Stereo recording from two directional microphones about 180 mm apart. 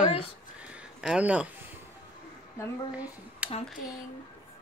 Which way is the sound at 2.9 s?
10° right (ahead or behind).